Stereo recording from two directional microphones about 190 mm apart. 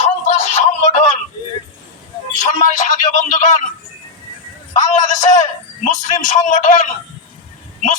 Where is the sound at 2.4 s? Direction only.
40° left (ahead or behind).